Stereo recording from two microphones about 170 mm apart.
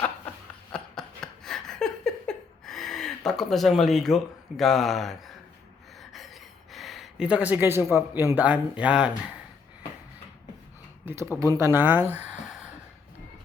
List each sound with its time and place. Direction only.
0.7 s a sound: 5° left (ahead or behind); by 7.9 s 15° right (ahead or behind)
7.9 s speech: 15° right (ahead or behind)
11.0 s speech: 15° right (ahead or behind)